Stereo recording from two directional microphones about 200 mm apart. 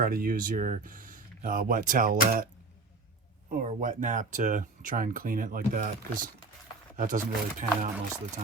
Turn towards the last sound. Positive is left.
turn(degrees=-40)  # may be behind; listen again after turning